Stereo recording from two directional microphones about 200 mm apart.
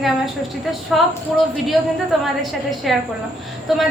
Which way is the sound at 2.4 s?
Centre (ahead or behind).